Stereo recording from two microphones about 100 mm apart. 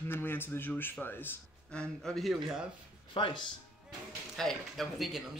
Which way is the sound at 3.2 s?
55° left (ahead or behind).